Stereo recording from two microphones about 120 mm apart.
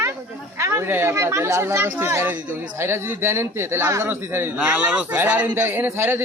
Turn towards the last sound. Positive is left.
turn(degrees=-20)  # may be behind; listen again after turning